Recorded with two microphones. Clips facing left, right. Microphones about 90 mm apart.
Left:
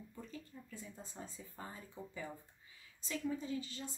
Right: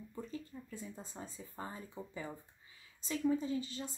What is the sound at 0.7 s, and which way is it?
Speech, 25° right (ahead or behind).